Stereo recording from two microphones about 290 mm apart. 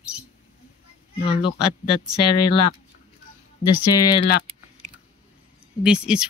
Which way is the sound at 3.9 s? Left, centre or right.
Centre.